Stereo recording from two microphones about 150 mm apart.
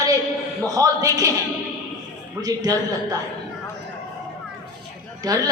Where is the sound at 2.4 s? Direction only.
25° right (ahead or behind).